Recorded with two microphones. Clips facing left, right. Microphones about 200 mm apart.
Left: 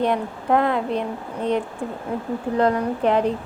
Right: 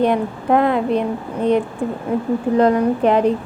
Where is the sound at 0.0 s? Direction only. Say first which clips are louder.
Right 5 dB; 15° right (ahead or behind).